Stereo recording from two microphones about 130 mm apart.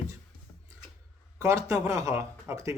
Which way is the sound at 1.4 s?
25° right (ahead or behind).